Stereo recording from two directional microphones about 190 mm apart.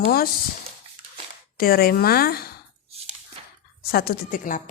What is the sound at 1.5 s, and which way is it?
Speech, 50° left (ahead or behind).